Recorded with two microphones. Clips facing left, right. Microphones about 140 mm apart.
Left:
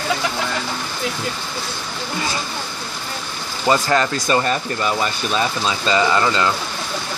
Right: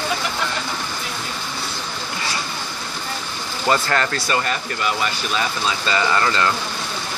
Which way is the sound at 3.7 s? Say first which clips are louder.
Left 3 dB; 15° left (ahead or behind).